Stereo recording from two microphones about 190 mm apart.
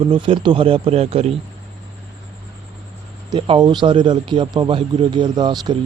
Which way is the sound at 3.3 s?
25° right (ahead or behind).